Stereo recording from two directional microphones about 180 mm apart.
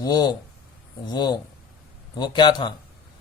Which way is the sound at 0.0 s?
20° left (ahead or behind).